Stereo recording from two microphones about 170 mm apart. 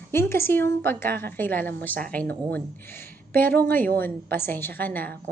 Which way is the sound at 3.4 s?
10° left (ahead or behind).